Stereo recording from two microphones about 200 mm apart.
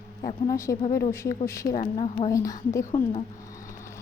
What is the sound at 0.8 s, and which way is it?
Speech, 40° left (ahead or behind).